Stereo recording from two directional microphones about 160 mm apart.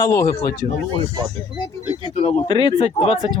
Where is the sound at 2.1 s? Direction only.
40° left (ahead or behind).